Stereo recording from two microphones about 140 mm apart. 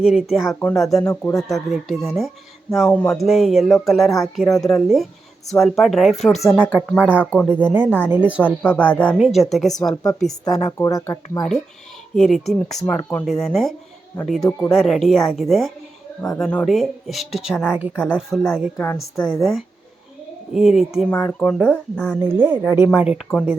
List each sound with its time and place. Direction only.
0.0 s a woman's voice: 5° right (ahead or behind)
1.0 s speech: 20° left (ahead or behind)
1.5 s a woman's voice: centre (ahead or behind)
8.6 s speech: 15° left (ahead or behind)
9.1 s a woman's voice: 5° right (ahead or behind)
9.9 s speech: 30° left (ahead or behind)
12.1 s a woman's voice: centre (ahead or behind)
12.9 s speech: 10° left (ahead or behind)
13.2 s a woman's voice: centre (ahead or behind)
18.8 s speech: 15° left (ahead or behind)
19.4 s a woman's voice: centre (ahead or behind)
21.1 s speech: 10° left (ahead or behind)
22.2 s speech: 15° right (ahead or behind)